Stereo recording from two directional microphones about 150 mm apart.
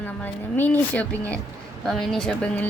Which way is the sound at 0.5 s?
10° left (ahead or behind).